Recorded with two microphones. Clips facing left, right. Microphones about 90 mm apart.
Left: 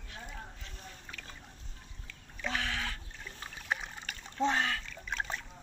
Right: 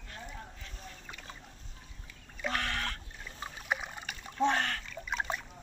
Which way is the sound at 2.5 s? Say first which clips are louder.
Right 1 dB; 70° right (ahead or behind).